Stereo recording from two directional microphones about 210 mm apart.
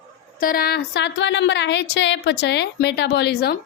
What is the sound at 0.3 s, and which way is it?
A woman's voice, 45° left (ahead or behind).